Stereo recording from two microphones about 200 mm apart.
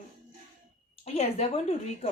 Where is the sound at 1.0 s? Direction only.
30° left (ahead or behind).